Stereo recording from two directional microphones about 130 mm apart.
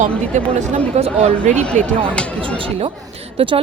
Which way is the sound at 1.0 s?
50° right (ahead or behind).